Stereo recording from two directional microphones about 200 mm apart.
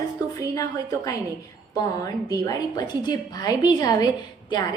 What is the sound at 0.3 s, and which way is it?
A woman's voice, 15° left (ahead or behind).